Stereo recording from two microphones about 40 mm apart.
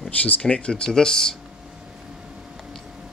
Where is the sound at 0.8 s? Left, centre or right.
Centre.